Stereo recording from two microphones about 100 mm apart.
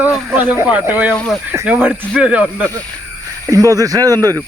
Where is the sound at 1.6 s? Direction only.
20° right (ahead or behind).